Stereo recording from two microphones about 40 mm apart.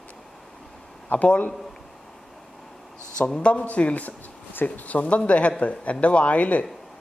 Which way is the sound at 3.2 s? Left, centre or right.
Left.